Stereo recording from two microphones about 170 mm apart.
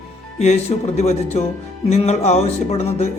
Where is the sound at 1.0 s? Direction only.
40° left (ahead or behind).